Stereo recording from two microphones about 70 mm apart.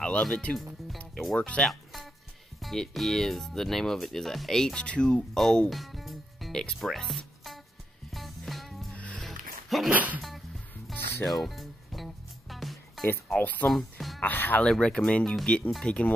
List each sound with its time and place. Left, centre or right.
0.0 s speech: centre
1.6 s music: centre
2.6 s speech: centre
6.8 s music: centre
8.9 s music: centre
9.2 s a sound: centre
9.8 s music: right
11.2 s music: centre
13.4 s speech: left
13.7 s music: centre
14.2 s music: left
14.6 s speech: centre